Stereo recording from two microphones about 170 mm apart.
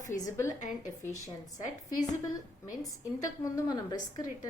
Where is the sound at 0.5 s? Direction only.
45° left (ahead or behind).